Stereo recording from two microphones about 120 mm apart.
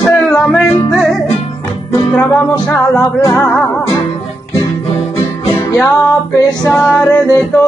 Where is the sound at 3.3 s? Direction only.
20° left (ahead or behind).